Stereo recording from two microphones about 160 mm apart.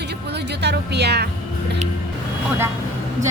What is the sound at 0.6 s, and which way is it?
Speech, 90° right.